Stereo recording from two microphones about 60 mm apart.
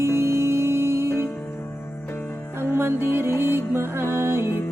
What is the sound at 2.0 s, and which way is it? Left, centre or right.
Music, left.